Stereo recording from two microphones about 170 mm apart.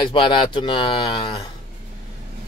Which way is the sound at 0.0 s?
30° left (ahead or behind).